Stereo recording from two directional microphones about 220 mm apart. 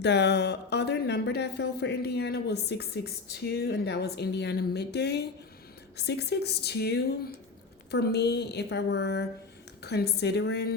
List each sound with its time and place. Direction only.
0.0 s speech: 50° left (ahead or behind)